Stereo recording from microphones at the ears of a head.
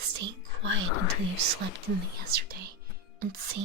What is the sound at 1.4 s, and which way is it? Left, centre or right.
Speech, right.